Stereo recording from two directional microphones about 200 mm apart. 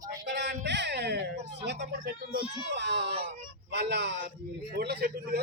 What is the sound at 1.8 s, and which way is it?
Speech, 45° right (ahead or behind).